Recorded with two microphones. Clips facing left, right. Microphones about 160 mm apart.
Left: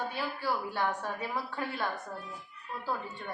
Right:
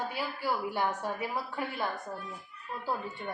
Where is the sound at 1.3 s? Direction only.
5° right (ahead or behind).